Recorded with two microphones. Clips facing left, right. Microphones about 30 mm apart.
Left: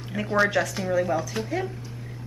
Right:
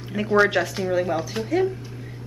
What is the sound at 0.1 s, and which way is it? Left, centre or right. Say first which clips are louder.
A woman's voice: right 4 dB; centre.